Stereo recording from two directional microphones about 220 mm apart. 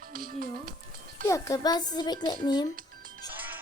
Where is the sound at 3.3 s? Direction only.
10° right (ahead or behind).